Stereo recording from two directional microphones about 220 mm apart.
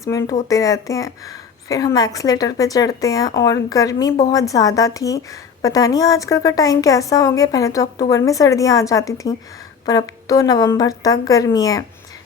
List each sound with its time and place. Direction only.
0.0 s a woman's voice: 15° left (ahead or behind)